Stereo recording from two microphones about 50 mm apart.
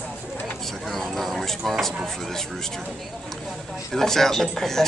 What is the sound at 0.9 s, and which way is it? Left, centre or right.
Speech, centre.